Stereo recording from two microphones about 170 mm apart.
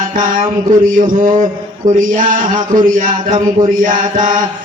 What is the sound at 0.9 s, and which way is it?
Speech, 50° right (ahead or behind).